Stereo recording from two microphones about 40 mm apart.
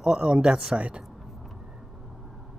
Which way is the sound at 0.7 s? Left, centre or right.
Right.